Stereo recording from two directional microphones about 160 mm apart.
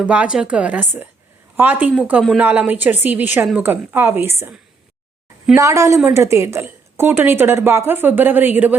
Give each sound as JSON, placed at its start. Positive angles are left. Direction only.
{"t": 0.0, "sound": "a woman's voice", "side_deg": -10}
{"t": 5.5, "sound": "a woman's voice", "side_deg": -20}